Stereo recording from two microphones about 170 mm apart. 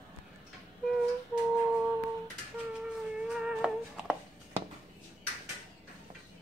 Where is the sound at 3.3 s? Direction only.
5° right (ahead or behind).